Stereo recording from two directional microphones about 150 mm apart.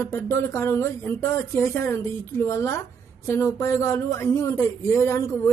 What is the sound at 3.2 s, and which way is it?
Speech, 20° left (ahead or behind).